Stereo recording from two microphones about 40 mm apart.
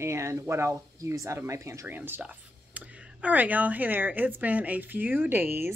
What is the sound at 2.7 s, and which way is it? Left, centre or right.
A woman's voice, right.